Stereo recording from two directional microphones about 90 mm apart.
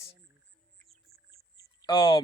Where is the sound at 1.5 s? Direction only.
50° left (ahead or behind).